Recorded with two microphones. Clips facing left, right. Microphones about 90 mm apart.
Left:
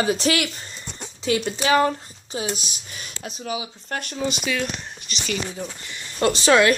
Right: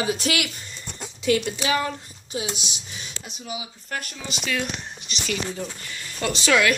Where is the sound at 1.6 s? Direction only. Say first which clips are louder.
Left 6 dB; 45° left (ahead or behind).